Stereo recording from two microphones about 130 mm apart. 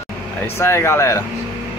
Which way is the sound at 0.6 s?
20° left (ahead or behind).